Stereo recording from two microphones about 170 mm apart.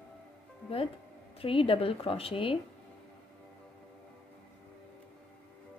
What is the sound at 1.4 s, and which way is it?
A woman's voice, 30° left (ahead or behind).